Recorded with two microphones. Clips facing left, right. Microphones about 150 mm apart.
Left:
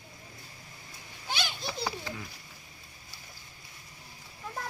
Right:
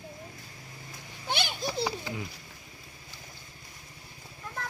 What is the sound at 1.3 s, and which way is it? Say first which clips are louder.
Children playing: right 3 dB; 60° right (ahead or behind).